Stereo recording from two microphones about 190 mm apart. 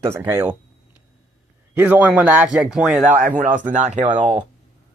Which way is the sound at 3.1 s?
45° right (ahead or behind).